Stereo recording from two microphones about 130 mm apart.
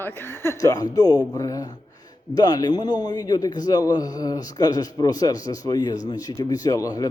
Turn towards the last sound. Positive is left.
turn(degrees=30)  # may be behind; listen again after turning